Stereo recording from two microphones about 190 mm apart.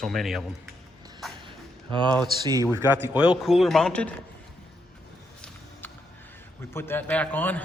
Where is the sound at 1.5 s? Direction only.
25° right (ahead or behind).